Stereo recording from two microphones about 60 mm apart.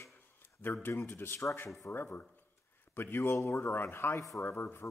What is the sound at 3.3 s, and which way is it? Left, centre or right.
Speech, left.